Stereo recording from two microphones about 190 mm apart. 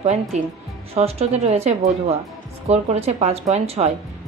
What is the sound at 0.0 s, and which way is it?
A woman's voice, 35° right (ahead or behind).